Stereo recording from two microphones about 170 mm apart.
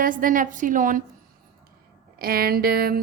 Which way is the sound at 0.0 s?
55° right (ahead or behind).